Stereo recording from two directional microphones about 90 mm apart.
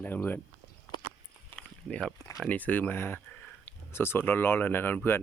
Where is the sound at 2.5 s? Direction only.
20° left (ahead or behind).